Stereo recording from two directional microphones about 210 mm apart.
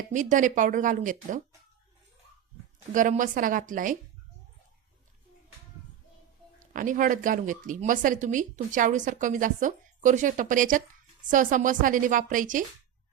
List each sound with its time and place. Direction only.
0.1 s speech: 35° right (ahead or behind)
2.9 s speech: 40° right (ahead or behind)
6.7 s speech: 40° right (ahead or behind)